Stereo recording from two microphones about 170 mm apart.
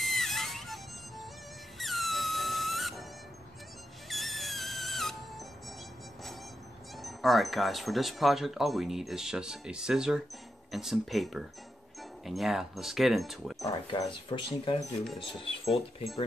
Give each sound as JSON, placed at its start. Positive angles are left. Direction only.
{"t": 0.0, "sound": "music", "side_deg": 0}
{"t": 1.8, "sound": "music", "side_deg": 0}
{"t": 4.1, "sound": "music", "side_deg": 0}
{"t": 7.0, "sound": "speech", "side_deg": 0}
{"t": 13.7, "sound": "speech", "side_deg": 25}